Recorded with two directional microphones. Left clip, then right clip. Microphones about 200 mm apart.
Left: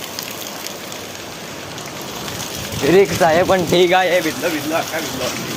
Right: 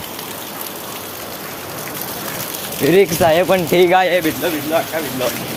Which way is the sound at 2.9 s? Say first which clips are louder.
Even; 10° right (ahead or behind).